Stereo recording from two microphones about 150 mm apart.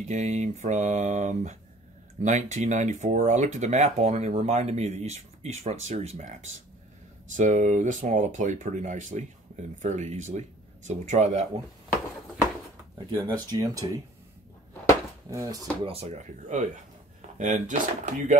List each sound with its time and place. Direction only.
0.0 s speech: 55° right (ahead or behind)
13.2 s speech: 25° right (ahead or behind)
15.2 s speech: 20° right (ahead or behind)
15.8 s speech: 40° right (ahead or behind)